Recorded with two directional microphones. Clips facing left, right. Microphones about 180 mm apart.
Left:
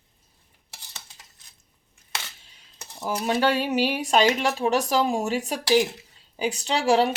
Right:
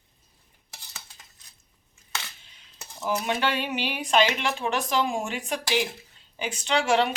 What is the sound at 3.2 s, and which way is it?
Speech, 40° left (ahead or behind).